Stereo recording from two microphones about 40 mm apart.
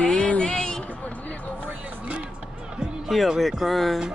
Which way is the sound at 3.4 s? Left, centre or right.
Centre.